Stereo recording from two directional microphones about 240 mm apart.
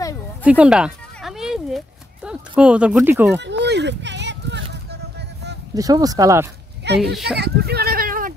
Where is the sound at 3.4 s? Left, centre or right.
Right.